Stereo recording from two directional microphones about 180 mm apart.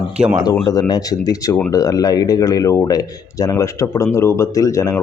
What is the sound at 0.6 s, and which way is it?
Speech, 20° left (ahead or behind).